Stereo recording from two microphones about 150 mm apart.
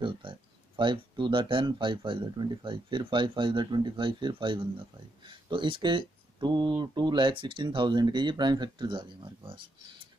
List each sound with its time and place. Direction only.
0.0 s speech: 35° right (ahead or behind)